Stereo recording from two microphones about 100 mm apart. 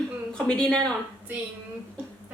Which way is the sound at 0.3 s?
5° left (ahead or behind).